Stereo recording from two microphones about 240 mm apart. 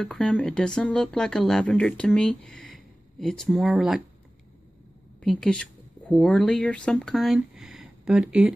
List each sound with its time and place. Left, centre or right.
0.0 s speech: centre
5.2 s a woman's voice: centre